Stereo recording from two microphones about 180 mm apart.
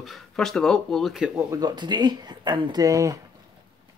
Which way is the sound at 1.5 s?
25° right (ahead or behind).